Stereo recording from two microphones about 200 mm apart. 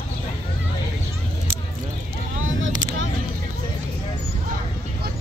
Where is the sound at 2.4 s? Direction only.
75° right (ahead or behind).